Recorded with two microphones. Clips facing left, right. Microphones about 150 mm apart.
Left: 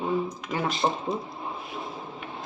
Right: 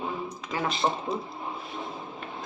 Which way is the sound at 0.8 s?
20° left (ahead or behind).